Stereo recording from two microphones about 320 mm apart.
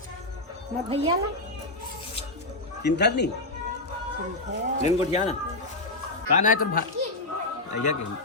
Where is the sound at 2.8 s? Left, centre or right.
Left.